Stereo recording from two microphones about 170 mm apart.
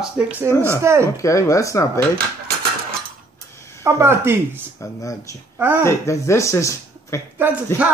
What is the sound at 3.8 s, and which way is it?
Speech, 15° right (ahead or behind).